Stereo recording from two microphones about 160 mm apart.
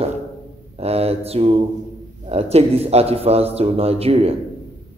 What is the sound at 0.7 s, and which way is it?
Mantra, 40° right (ahead or behind).